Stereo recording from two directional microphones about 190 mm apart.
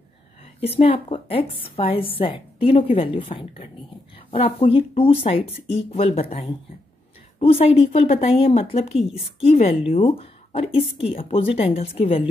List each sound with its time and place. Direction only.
0.6 s a woman's voice: 30° left (ahead or behind)
7.3 s a woman's voice: 30° left (ahead or behind)